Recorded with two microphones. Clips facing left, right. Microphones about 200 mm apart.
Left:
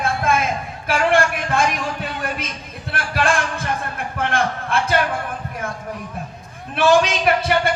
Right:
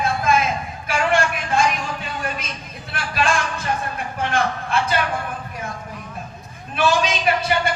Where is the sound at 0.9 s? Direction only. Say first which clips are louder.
Left 3 dB; 55° left (ahead or behind).